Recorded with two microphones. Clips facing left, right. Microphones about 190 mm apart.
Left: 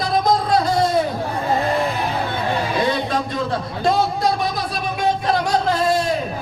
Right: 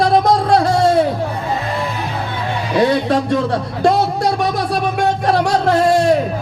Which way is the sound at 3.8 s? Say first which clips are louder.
Right 4 dB; 70° right (ahead or behind).